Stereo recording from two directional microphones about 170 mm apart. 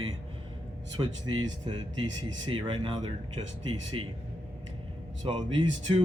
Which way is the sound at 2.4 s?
30° right (ahead or behind).